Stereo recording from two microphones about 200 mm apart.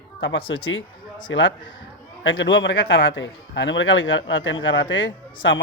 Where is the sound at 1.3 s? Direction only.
70° left (ahead or behind).